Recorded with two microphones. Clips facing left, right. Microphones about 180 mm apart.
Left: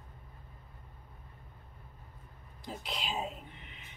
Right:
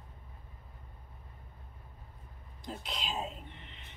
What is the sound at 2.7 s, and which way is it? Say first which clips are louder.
Whispering: left 1 dB; 5° left (ahead or behind).